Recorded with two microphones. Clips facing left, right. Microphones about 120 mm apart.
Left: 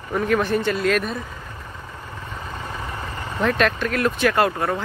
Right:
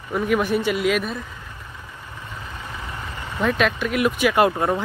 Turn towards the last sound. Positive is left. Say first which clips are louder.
# right 2 dB
turn(degrees=-20)  # may be behind; listen again after turning